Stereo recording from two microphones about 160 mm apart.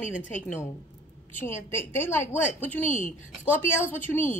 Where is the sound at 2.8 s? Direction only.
50° left (ahead or behind).